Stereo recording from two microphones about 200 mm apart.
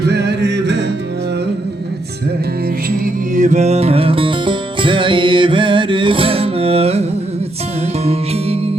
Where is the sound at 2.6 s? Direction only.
45° right (ahead or behind).